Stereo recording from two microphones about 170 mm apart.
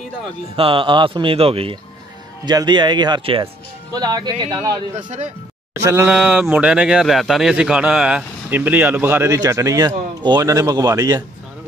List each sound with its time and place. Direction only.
0.6 s speech: 30° right (ahead or behind)
4.9 s speech: 45° right (ahead or behind)
5.9 s a man's voice: 10° right (ahead or behind)